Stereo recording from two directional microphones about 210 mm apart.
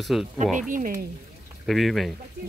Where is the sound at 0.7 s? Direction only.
40° right (ahead or behind).